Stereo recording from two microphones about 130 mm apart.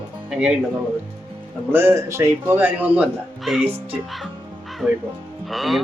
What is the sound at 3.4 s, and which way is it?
Speech, centre (ahead or behind).